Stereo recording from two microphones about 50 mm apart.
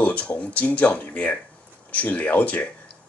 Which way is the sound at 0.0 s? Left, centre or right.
Left.